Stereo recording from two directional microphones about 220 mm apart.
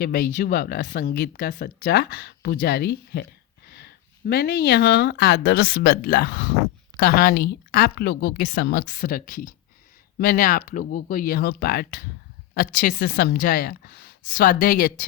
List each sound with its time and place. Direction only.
0.0 s a woman's voice: 40° left (ahead or behind)